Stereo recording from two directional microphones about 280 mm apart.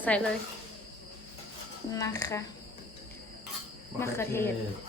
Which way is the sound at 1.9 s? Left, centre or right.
Centre.